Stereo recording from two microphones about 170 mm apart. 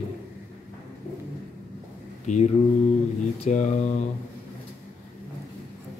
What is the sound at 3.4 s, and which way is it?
Speech, 45° left (ahead or behind).